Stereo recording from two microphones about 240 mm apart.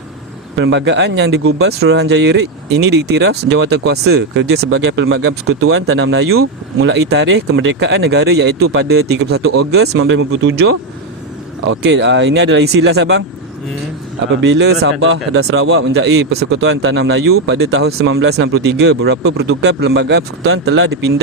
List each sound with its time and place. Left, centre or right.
0.5 s speech: right
14.4 s speech: right